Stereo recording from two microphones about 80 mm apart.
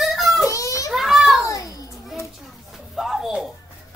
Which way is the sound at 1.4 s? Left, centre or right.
Left.